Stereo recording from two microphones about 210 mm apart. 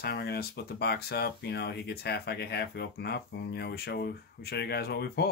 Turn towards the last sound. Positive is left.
turn(degrees=50)  # may be behind; listen again after turning